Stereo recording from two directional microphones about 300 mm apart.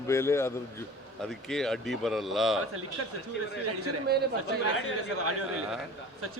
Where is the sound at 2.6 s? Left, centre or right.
Right.